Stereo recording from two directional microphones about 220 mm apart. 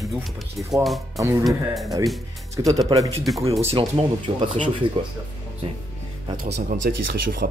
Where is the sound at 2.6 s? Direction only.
20° right (ahead or behind).